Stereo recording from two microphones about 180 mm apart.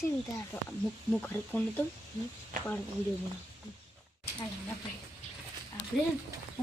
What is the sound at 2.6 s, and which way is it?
Speech, 45° right (ahead or behind).